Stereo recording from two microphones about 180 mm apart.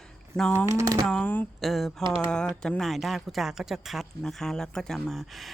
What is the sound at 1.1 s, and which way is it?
Speech, 5° left (ahead or behind).